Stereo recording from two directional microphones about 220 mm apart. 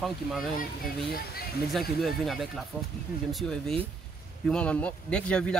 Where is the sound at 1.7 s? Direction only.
Centre (ahead or behind).